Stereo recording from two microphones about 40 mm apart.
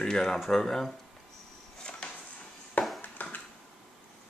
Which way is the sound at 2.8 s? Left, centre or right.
Left.